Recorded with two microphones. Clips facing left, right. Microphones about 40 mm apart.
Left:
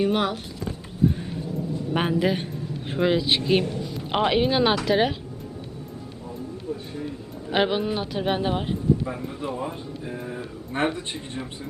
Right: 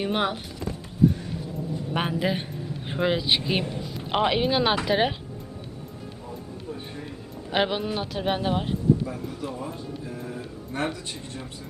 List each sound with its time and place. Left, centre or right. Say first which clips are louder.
0.0 s speech: left 3 dB; centre
1.0 s music: right 1 dB; centre
1.9 s speech: left 3 dB; centre
4.9 s speech: left 2 dB; centre
7.5 s speech: left 2 dB; centre
9.0 s speech: left 2 dB; left